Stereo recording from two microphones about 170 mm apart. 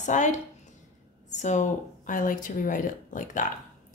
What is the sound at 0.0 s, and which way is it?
A woman's voice, 45° left (ahead or behind).